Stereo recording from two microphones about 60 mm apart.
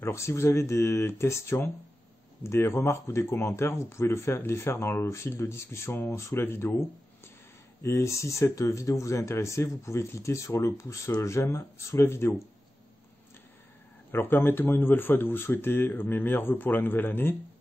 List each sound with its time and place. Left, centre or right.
0.0 s speech: left
7.8 s speech: left
14.3 s speech: left